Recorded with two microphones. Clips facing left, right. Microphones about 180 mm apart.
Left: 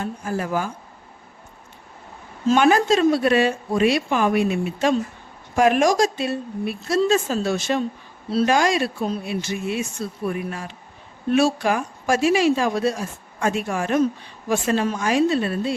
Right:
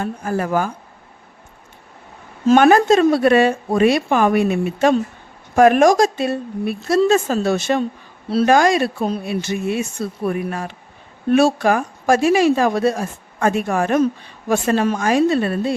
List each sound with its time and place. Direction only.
0.0 s speech: 55° right (ahead or behind)
2.5 s speech: 55° right (ahead or behind)
8.3 s speech: 70° right (ahead or behind)
8.5 s speech: 50° right (ahead or behind)